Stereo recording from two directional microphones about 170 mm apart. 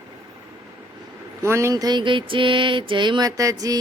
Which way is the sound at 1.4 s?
15° right (ahead or behind).